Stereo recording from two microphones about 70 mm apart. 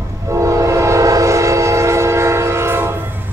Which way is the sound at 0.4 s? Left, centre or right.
Right.